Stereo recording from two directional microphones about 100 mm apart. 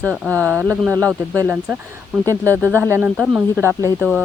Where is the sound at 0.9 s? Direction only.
30° right (ahead or behind).